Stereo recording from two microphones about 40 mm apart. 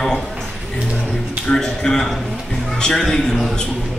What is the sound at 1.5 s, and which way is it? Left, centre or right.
A man's voice, centre.